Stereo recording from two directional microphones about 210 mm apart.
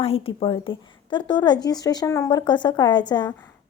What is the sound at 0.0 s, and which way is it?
A woman's voice, 25° left (ahead or behind).